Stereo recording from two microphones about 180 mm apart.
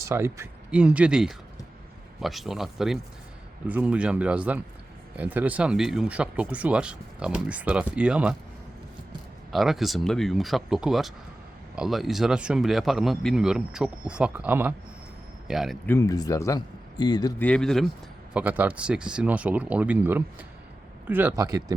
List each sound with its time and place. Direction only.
0.0 s speech: 15° right (ahead or behind)
9.5 s speech: centre (ahead or behind)
15.9 s a man's voice: 20° left (ahead or behind)
17.4 s speech: 5° left (ahead or behind)
18.3 s speech: 10° right (ahead or behind)